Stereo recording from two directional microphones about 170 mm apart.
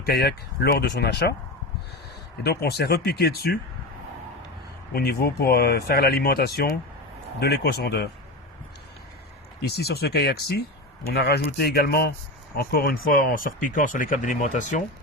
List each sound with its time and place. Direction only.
0.0 s speech: 65° left (ahead or behind)
2.4 s speech: 70° left (ahead or behind)
4.9 s speech: 65° left (ahead or behind)
9.6 s speech: 70° left (ahead or behind); by 14.8 s 45° left (ahead or behind)